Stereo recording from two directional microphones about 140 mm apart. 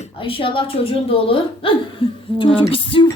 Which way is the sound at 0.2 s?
40° left (ahead or behind).